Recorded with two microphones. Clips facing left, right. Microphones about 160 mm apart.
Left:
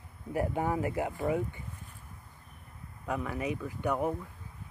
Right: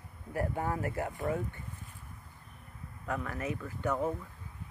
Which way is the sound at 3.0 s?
15° left (ahead or behind).